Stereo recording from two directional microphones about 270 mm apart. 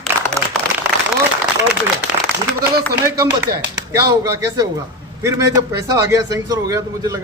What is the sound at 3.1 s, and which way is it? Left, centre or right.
Speech, centre.